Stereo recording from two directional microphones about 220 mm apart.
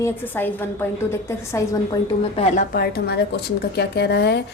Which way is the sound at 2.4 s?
30° left (ahead or behind).